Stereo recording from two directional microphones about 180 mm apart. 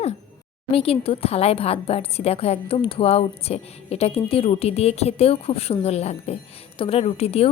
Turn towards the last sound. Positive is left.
turn(degrees=35)  # may be behind; listen again after turning